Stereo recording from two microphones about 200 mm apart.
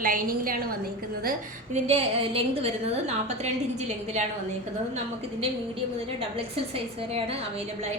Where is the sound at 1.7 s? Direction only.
35° right (ahead or behind).